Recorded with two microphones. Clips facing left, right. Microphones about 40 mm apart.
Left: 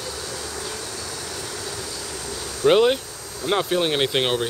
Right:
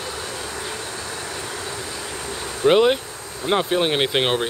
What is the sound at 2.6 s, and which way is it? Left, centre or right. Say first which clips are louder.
Speech: right 1 dB; centre.